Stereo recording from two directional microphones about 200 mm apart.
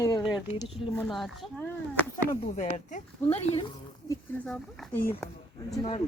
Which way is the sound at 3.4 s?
25° left (ahead or behind).